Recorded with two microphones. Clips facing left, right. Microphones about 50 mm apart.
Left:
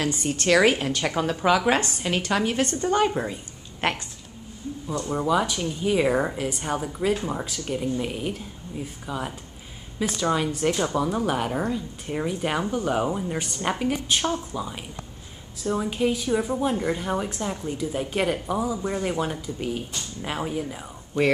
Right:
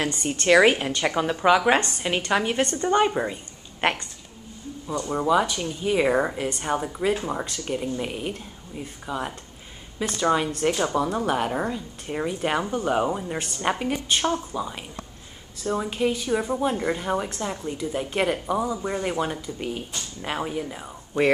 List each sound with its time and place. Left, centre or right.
0.5 s a woman's voice: centre
2.0 s a woman's voice: centre
4.8 s a woman's voice: centre